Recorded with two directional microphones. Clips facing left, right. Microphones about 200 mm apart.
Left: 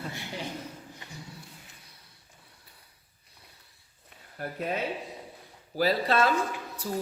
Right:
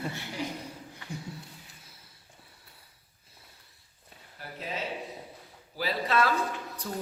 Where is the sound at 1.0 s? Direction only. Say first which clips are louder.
Right 7 dB; 20° left (ahead or behind).